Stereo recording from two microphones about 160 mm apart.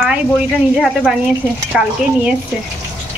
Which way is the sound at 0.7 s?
Centre (ahead or behind).